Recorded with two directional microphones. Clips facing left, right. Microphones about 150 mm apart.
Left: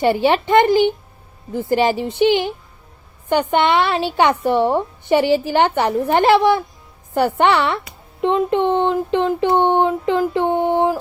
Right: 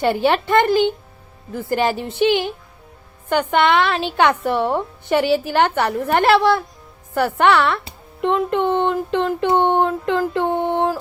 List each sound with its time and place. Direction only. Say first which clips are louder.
0.0 s a woman's voice: left 2 dB; 15° left (ahead or behind)